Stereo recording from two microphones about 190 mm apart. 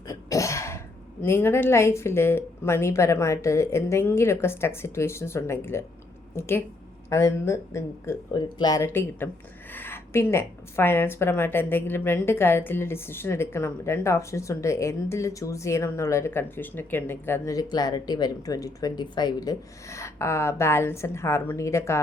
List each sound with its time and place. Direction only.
0.1 s throat clearing: 15° left (ahead or behind)
1.2 s a woman's voice: 10° left (ahead or behind)
7.1 s a woman's voice: 15° left (ahead or behind)